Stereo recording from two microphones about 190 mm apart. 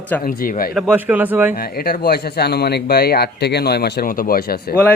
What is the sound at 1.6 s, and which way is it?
Speech, 50° left (ahead or behind).